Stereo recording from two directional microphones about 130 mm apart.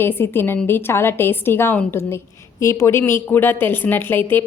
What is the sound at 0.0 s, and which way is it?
A woman's voice, 15° left (ahead or behind).